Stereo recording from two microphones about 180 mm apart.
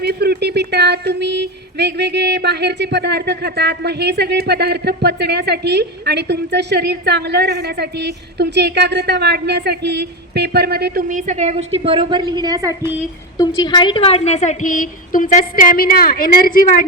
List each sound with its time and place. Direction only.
0.0 s speech: 60° right (ahead or behind)
11.1 s a woman's voice: 40° right (ahead or behind); by 12.9 s 20° right (ahead or behind)
13.3 s a woman's voice: 20° left (ahead or behind); by 16.8 s 50° left (ahead or behind)